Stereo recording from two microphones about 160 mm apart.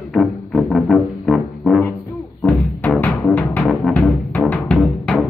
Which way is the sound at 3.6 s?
Centre (ahead or behind).